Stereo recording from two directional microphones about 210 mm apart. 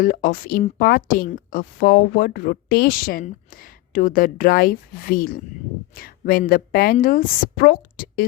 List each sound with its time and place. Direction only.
0.0 s speech: 40° left (ahead or behind)